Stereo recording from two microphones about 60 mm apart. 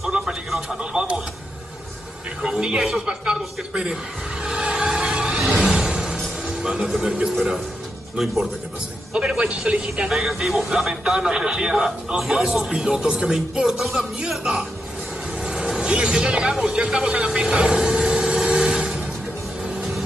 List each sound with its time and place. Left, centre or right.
0.0 s a sound: centre
0.7 s a sound: centre
2.4 s speech: centre
2.8 s vehicle: centre
8.2 s speech: centre
15.3 s music: centre